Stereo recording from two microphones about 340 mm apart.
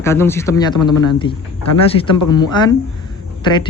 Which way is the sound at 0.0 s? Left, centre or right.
Centre.